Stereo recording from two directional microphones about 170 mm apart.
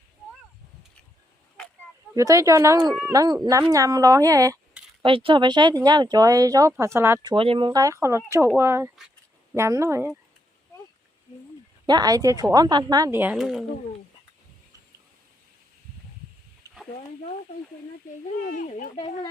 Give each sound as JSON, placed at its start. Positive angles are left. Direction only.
{"t": 2.1, "sound": "speech", "side_deg": -20}
{"t": 5.0, "sound": "speech", "side_deg": -30}
{"t": 7.7, "sound": "speech", "side_deg": -20}
{"t": 11.9, "sound": "speech", "side_deg": -25}
{"t": 16.7, "sound": "a sound", "side_deg": -20}
{"t": 18.4, "sound": "speech", "side_deg": 50}